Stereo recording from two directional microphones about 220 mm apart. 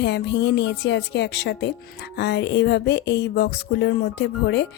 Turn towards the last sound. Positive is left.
turn(degrees=55)  # may be behind; listen again after turning